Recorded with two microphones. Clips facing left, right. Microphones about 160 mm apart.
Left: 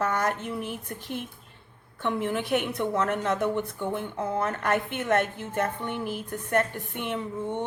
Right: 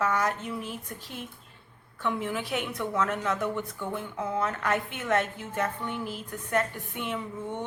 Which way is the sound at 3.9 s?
55° left (ahead or behind).